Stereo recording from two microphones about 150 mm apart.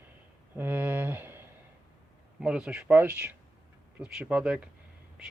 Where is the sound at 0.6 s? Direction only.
15° right (ahead or behind).